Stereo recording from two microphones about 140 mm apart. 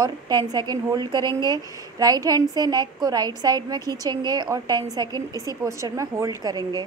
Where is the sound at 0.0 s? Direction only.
30° right (ahead or behind).